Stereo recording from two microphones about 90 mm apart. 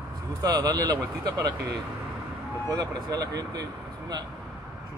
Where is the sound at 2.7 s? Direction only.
45° right (ahead or behind).